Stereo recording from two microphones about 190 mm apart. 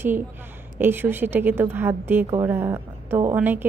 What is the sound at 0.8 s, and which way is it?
A woman's voice, 10° right (ahead or behind).